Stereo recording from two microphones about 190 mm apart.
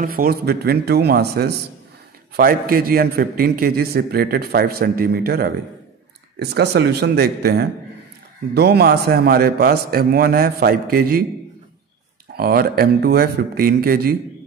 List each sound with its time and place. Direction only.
0.0 s a man's voice: 50° right (ahead or behind)
12.4 s a man's voice: 55° right (ahead or behind)